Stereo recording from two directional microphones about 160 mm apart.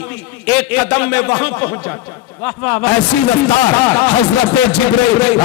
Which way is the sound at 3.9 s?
10° left (ahead or behind).